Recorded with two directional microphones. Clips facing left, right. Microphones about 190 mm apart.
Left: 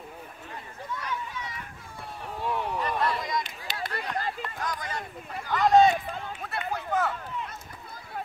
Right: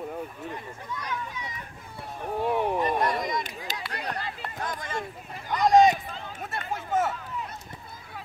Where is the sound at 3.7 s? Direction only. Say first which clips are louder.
Left 4 dB; 45° right (ahead or behind).